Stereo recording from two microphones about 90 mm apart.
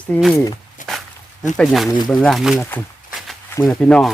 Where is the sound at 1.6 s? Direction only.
5° left (ahead or behind).